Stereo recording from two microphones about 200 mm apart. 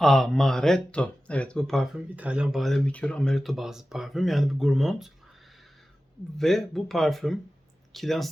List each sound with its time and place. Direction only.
0.0 s speech: centre (ahead or behind)
6.3 s speech: centre (ahead or behind)